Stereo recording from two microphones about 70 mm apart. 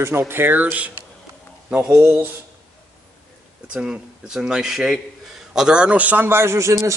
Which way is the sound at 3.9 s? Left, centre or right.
Centre.